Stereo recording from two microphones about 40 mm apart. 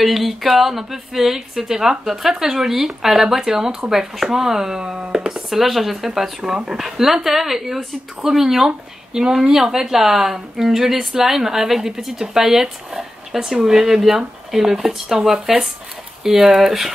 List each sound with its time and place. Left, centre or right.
0.0 s a woman's voice: centre; by 5.1 s right
5.1 s a woman's voice: centre
15.3 s speech: right
16.3 s a woman's voice: centre